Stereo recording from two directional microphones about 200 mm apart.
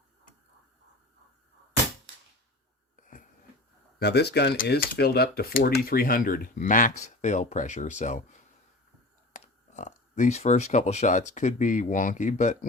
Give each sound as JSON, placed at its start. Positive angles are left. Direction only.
{"t": 2.9, "sound": "a sound", "side_deg": 40}
{"t": 4.0, "sound": "speech", "side_deg": 55}
{"t": 9.3, "sound": "speech", "side_deg": 40}